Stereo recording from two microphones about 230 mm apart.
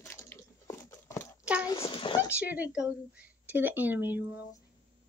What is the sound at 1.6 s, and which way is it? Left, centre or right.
Speech, left.